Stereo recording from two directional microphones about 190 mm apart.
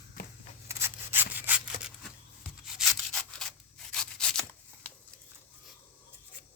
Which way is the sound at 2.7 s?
5° left (ahead or behind).